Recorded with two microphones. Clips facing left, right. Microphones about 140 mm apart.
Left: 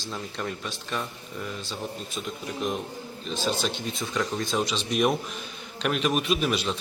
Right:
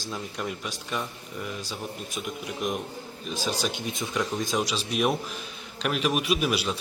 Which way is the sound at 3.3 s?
10° right (ahead or behind).